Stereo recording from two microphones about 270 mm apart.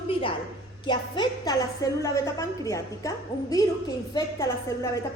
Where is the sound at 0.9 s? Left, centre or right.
Centre.